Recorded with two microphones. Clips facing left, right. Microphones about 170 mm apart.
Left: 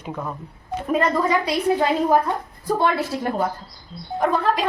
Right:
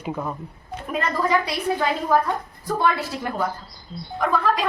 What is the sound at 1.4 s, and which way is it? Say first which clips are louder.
A woman's voice: left 4 dB; 25° left (ahead or behind).